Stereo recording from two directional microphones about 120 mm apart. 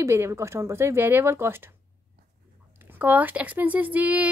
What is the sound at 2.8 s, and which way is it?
A woman's voice, 15° right (ahead or behind).